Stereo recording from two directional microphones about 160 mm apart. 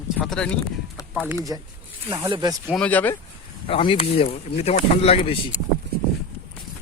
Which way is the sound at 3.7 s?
35° left (ahead or behind).